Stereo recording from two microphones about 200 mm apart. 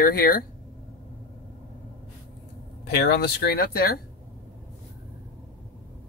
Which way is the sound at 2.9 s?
55° left (ahead or behind).